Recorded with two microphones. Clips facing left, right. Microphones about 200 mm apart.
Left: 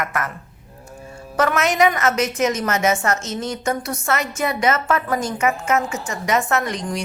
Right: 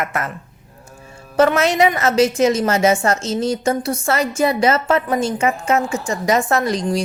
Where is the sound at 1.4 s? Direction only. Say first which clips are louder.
Right 4 dB; 30° right (ahead or behind).